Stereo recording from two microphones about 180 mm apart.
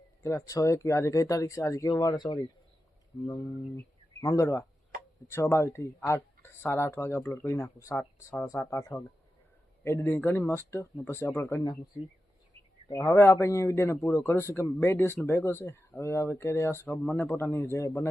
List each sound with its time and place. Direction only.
0.2 s a man's voice: 15° left (ahead or behind)
3.8 s a man's voice: 15° left (ahead or behind)
12.9 s a man's voice: 15° left (ahead or behind)